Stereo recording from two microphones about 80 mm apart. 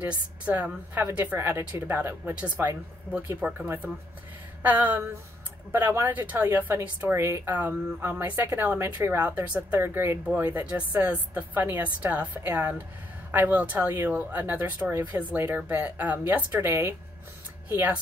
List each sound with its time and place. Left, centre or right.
0.0 s a woman's voice: right
6.0 s a woman's voice: right
9.2 s a woman's voice: centre
9.8 s speech: right
10.2 s a woman's voice: right